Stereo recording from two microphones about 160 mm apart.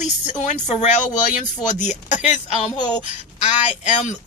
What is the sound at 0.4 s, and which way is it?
Speech, 50° left (ahead or behind).